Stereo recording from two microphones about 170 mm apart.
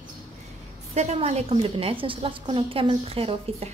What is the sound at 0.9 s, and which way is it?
A woman's voice, 40° right (ahead or behind).